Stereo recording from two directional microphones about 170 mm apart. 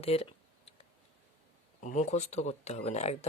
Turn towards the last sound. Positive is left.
turn(degrees=40)  # may be behind; listen again after turning